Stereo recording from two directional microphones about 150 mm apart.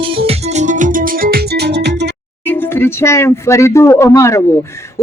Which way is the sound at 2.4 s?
15° left (ahead or behind).